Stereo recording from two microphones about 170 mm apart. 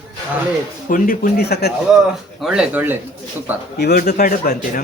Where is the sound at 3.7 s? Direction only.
65° left (ahead or behind).